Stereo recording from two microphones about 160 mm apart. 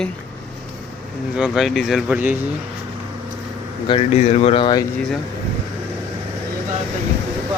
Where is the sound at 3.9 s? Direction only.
45° left (ahead or behind).